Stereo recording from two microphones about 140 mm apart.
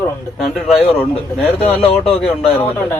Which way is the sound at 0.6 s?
10° left (ahead or behind).